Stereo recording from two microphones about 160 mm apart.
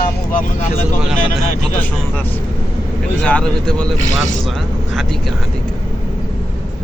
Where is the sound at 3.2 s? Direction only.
5° left (ahead or behind).